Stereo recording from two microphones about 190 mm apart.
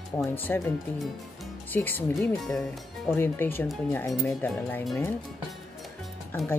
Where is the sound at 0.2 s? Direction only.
10° left (ahead or behind).